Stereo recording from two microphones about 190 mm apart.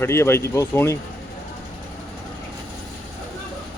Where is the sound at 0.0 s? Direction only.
15° left (ahead or behind).